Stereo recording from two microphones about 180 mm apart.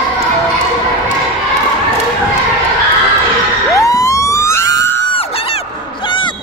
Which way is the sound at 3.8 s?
20° left (ahead or behind).